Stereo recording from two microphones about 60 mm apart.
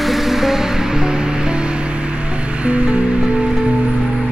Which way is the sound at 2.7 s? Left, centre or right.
Right.